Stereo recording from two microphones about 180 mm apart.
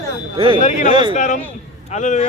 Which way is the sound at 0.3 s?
30° right (ahead or behind).